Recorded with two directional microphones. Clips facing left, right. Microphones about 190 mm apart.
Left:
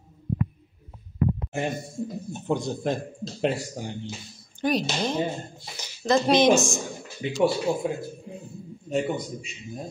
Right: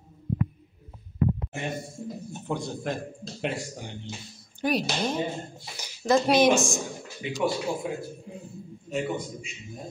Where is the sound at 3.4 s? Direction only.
35° left (ahead or behind).